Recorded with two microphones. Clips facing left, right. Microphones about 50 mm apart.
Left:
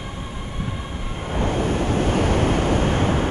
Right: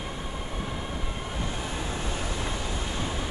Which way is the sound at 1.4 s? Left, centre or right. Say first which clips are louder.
Left 14 dB; left.